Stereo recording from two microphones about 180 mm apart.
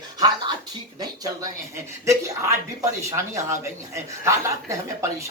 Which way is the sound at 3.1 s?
15° right (ahead or behind).